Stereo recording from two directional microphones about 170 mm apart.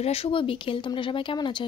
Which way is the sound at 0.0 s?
35° left (ahead or behind).